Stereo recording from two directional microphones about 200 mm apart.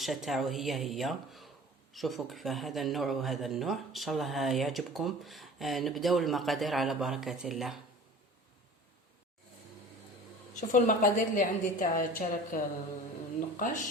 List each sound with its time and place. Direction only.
0.0 s speech: centre (ahead or behind)
10.5 s a woman's voice: 40° left (ahead or behind)